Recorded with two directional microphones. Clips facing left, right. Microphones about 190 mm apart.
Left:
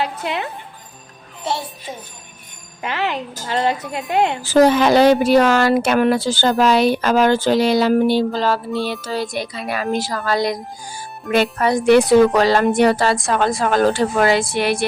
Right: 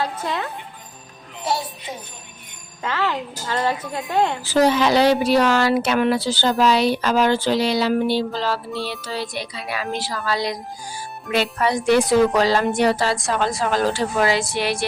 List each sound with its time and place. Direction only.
2.8 s a woman's voice: 15° left (ahead or behind)
4.4 s a woman's voice: 50° left (ahead or behind)